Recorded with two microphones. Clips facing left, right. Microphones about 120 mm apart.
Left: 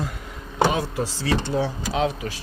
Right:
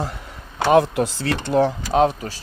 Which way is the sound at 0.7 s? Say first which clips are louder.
Right 9 dB; 60° right (ahead or behind).